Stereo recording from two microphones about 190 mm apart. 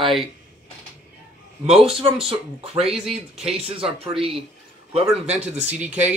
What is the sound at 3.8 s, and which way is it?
Speech, 30° right (ahead or behind).